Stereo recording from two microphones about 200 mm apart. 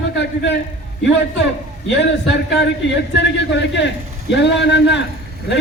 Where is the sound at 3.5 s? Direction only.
60° left (ahead or behind).